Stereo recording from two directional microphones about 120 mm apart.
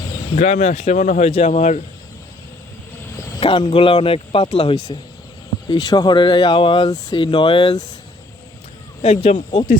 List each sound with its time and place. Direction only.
0.3 s speech: 75° left (ahead or behind)
3.4 s speech: 45° left (ahead or behind)
5.6 s speech: 35° left (ahead or behind)
9.0 s speech: 65° left (ahead or behind)